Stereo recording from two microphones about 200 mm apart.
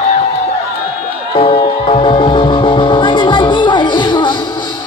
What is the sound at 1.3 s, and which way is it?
Music, 25° left (ahead or behind).